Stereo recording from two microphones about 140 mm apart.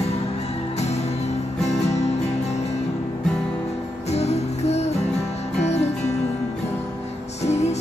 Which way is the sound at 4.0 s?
50° left (ahead or behind).